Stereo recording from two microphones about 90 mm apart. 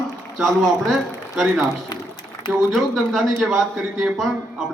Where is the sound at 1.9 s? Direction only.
55° left (ahead or behind).